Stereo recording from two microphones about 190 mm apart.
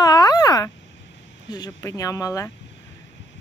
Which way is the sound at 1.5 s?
20° left (ahead or behind).